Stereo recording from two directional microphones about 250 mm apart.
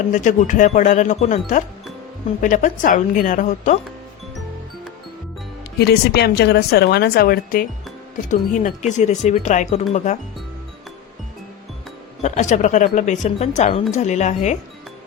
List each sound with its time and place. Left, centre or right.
0.1 s a woman's voice: left
5.8 s a woman's voice: left
12.2 s speech: left